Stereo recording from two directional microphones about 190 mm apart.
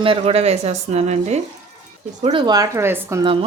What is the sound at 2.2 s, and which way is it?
Speech, 25° right (ahead or behind).